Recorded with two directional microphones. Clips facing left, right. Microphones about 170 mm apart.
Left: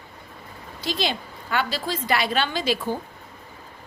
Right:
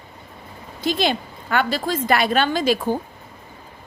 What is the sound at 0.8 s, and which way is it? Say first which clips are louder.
A woman's voice: right 6 dB; 55° right (ahead or behind).